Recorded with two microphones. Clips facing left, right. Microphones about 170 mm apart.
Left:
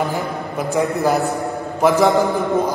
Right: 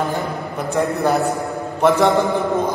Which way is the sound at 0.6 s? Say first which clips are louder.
Left 1 dB; centre (ahead or behind).